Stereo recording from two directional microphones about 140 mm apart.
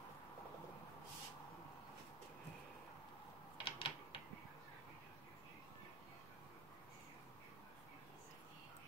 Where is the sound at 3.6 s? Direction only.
40° left (ahead or behind).